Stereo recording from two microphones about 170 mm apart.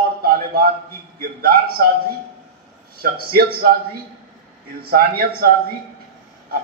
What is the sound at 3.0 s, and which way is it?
Speech, 65° right (ahead or behind).